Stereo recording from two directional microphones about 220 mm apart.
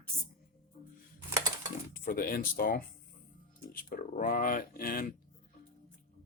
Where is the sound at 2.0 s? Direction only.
40° left (ahead or behind).